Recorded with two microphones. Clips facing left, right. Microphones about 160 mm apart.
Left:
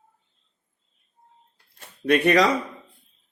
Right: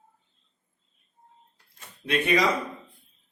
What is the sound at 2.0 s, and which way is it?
Speech, 70° left (ahead or behind).